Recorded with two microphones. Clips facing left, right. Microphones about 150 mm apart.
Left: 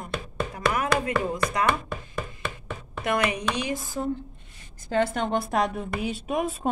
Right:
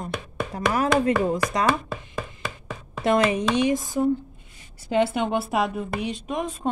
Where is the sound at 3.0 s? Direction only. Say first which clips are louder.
Right 5 dB; 25° right (ahead or behind).